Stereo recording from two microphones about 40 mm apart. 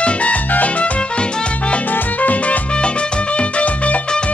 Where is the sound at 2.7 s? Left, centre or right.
Left.